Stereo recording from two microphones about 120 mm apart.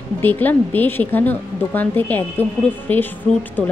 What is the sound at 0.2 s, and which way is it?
A woman's voice, 15° left (ahead or behind).